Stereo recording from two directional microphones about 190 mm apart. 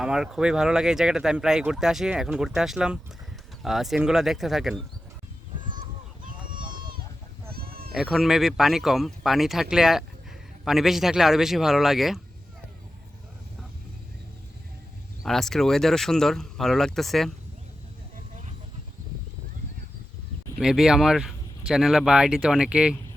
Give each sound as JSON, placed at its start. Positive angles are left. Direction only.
{"t": 0.0, "sound": "speech", "side_deg": -5}
{"t": 6.2, "sound": "run", "side_deg": -45}
{"t": 7.5, "sound": "a sound", "side_deg": -55}
{"t": 7.9, "sound": "speech", "side_deg": 0}
{"t": 15.2, "sound": "speech", "side_deg": 0}
{"t": 20.6, "sound": "speech", "side_deg": -5}